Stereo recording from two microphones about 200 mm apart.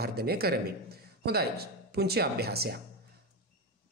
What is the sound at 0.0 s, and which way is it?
Speech, 50° right (ahead or behind).